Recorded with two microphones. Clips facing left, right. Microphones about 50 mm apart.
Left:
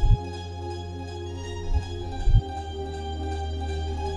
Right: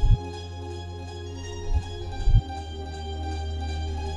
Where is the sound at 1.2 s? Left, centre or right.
Left.